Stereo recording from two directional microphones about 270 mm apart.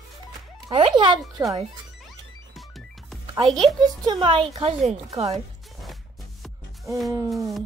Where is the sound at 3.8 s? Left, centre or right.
Centre.